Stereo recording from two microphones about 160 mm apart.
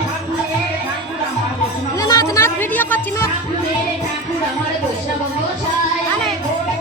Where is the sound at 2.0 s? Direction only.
20° left (ahead or behind).